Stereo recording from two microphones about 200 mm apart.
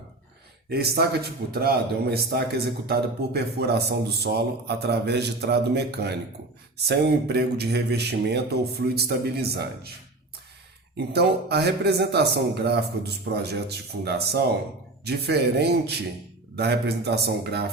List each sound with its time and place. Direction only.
0.7 s a man's voice: 50° right (ahead or behind)
10.9 s a man's voice: 55° right (ahead or behind)